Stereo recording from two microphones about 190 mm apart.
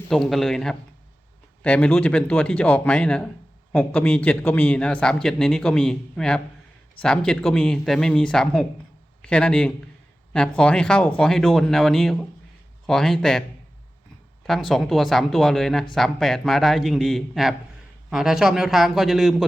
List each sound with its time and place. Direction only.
0.1 s a man's voice: centre (ahead or behind)
14.4 s a man's voice: centre (ahead or behind)